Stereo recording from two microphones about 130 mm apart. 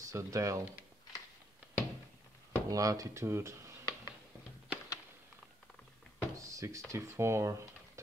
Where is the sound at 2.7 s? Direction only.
25° right (ahead or behind).